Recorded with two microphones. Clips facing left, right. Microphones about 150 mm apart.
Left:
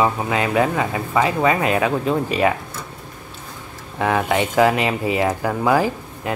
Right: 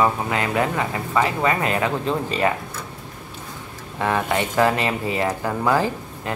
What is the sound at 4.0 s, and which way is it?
Speech, 15° left (ahead or behind).